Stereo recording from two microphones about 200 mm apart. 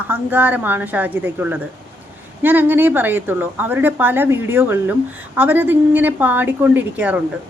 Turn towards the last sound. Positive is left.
turn(degrees=-5)  # may be behind; listen again after turning